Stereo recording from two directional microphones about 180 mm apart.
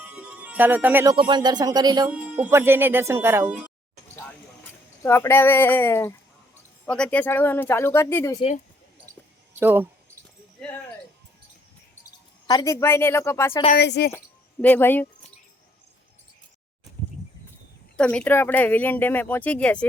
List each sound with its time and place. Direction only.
0.0 s music: 10° right (ahead or behind)
1.1 s speech: 25° right (ahead or behind)
2.0 s speech: 5° right (ahead or behind)
5.0 s speech: 15° left (ahead or behind)
9.5 s speech: 10° right (ahead or behind)
12.5 s speech: 20° left (ahead or behind)
13.7 s a woman's voice: 65° left (ahead or behind)
14.6 s speech: 10° left (ahead or behind)
17.9 s speech: 5° left (ahead or behind)